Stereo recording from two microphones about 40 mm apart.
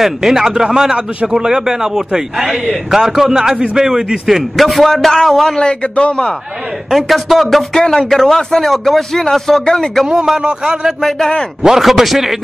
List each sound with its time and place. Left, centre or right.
0.0 s a man's voice: centre
4.6 s a man's voice: centre
5.6 s a man's voice: left
6.9 s a man's voice: centre
7.7 s a man's voice: centre
10.0 s a man's voice: centre
11.0 s a man's voice: centre
11.6 s a man's voice: centre